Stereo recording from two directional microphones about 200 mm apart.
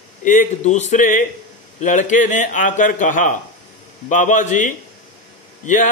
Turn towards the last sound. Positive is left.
turn(degrees=40)  # may be behind; listen again after turning